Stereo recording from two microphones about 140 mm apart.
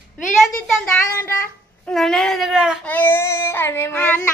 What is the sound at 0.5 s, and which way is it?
Child singing, 10° left (ahead or behind).